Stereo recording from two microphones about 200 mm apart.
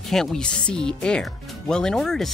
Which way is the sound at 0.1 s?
Centre (ahead or behind).